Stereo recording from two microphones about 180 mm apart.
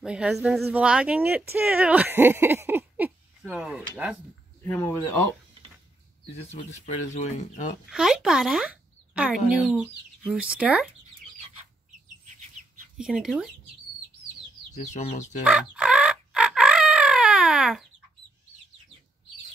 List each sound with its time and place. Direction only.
0.0 s speech: 5° right (ahead or behind)
4.6 s speech: 15° left (ahead or behind)
6.5 s speech: 40° left (ahead or behind)
7.9 s speech: 5° right (ahead or behind)
12.9 s speech: centre (ahead or behind)
14.7 s speech: 40° left (ahead or behind)
15.4 s chicken: 5° right (ahead or behind)